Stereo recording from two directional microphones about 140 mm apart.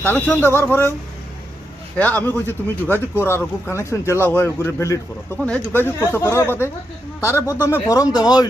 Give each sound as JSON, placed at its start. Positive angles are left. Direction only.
{"t": 0.0, "sound": "speech", "side_deg": 15}
{"t": 2.0, "sound": "speech", "side_deg": 10}
{"t": 7.3, "sound": "speech", "side_deg": -15}
{"t": 7.7, "sound": "speech", "side_deg": 25}